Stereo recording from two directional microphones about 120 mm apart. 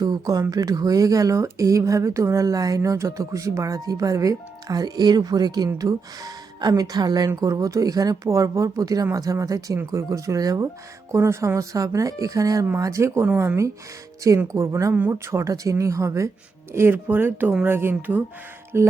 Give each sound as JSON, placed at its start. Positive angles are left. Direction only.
{"t": 0.0, "sound": "speech", "side_deg": -30}